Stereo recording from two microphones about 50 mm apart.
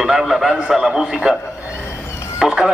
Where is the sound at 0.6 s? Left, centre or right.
Centre.